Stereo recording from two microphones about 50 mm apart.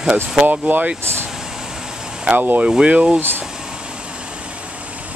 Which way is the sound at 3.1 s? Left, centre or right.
Right.